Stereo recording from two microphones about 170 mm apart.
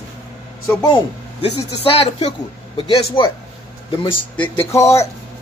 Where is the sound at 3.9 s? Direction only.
30° left (ahead or behind).